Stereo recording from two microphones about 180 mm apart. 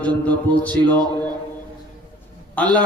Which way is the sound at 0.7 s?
25° right (ahead or behind).